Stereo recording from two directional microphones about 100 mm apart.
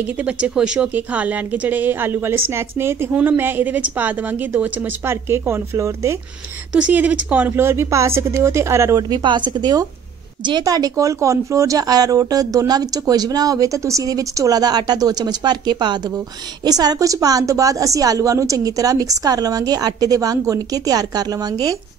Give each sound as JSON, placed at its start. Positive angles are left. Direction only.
{"t": 0.0, "sound": "a woman's voice", "side_deg": -15}
{"t": 6.7, "sound": "speech", "side_deg": -15}
{"t": 9.1, "sound": "speech", "side_deg": -50}